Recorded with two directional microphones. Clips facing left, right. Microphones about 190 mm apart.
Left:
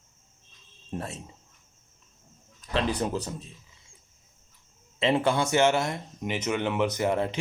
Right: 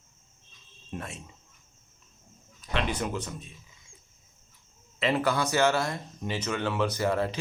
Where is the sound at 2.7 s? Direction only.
35° left (ahead or behind).